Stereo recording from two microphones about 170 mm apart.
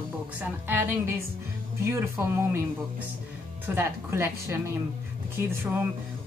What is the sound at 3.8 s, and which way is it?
Speech, 15° right (ahead or behind).